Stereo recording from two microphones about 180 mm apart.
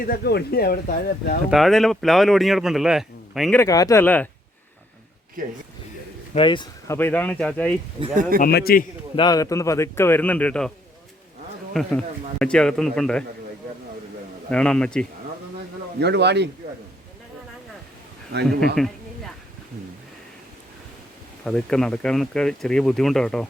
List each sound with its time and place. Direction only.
0.0 s speech: 60° left (ahead or behind)
1.5 s speech: centre (ahead or behind)
3.5 s a man's voice: 15° left (ahead or behind)
6.3 s speech: 25° left (ahead or behind)
6.9 s a man's voice: 10° left (ahead or behind)
8.0 s speech: 45° right (ahead or behind)
8.4 s speech: 55° left (ahead or behind)
9.1 s a man's voice: 20° left (ahead or behind); by 10.7 s 5° left (ahead or behind)
11.7 s speech: centre (ahead or behind)
14.5 s speech: 5° left (ahead or behind)
16.0 s speech: 70° right (ahead or behind)
18.8 s speech: centre (ahead or behind)
21.4 s speech: 5° left (ahead or behind)